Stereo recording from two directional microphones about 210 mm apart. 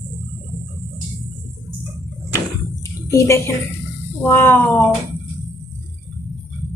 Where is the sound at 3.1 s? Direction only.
15° left (ahead or behind).